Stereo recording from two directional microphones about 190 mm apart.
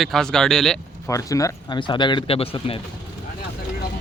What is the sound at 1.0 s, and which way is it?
Speech, 15° left (ahead or behind).